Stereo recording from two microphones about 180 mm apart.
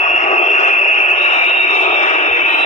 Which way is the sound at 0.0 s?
40° left (ahead or behind).